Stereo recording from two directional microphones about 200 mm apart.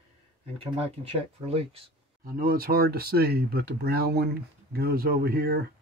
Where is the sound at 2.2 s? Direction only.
45° right (ahead or behind).